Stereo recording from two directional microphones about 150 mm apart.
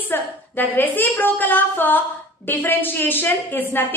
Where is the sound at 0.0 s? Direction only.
10° left (ahead or behind).